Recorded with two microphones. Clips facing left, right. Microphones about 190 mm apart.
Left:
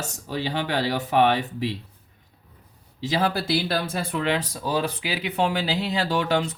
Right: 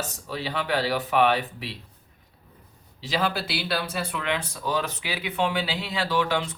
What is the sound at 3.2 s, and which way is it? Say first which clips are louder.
Speech: left 4 dB; 40° left (ahead or behind).